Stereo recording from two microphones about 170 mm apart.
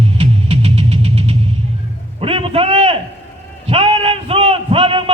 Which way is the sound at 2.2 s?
35° right (ahead or behind).